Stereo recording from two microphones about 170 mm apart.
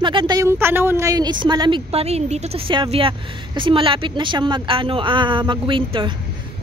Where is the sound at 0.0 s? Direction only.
30° right (ahead or behind).